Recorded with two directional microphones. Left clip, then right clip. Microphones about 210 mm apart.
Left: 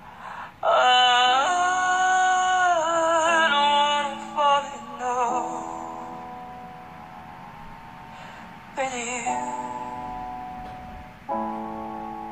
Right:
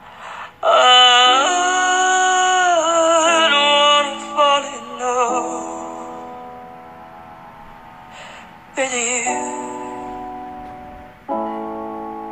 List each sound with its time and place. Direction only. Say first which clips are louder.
0.2 s a sound: right 6 dB; 35° right (ahead or behind)
8.7 s music: right 8 dB; 35° right (ahead or behind)
11.2 s music: right 5 dB; 40° right (ahead or behind)